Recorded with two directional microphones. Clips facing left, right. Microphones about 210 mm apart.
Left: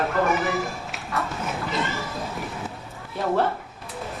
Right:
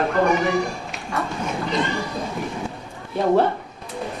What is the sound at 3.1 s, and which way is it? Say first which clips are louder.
Speech: right 5 dB; 20° right (ahead or behind).